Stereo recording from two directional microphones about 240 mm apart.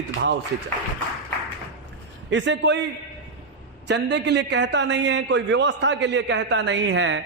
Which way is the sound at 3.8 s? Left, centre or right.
Right.